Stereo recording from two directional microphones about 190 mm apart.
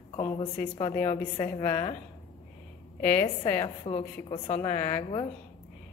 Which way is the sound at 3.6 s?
30° left (ahead or behind).